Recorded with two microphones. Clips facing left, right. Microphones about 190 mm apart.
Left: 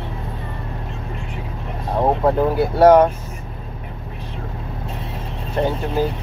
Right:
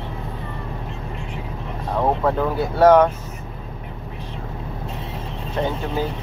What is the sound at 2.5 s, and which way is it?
Speech, 10° left (ahead or behind).